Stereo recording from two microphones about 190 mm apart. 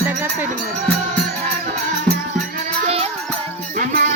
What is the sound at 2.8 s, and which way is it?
Music, 35° right (ahead or behind).